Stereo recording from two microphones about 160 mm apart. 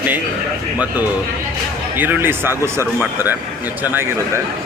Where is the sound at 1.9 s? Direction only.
10° right (ahead or behind).